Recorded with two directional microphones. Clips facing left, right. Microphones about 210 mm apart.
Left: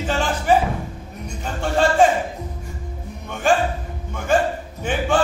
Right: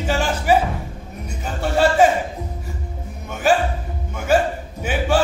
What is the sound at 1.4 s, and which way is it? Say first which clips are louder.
Music: right 1 dB; 5° right (ahead or behind).